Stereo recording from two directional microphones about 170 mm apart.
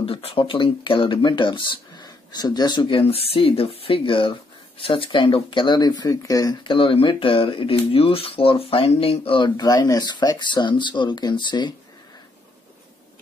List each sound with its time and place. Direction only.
0.0 s speech: 35° left (ahead or behind)